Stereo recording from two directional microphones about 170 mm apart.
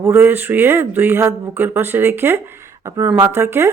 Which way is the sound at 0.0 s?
10° right (ahead or behind).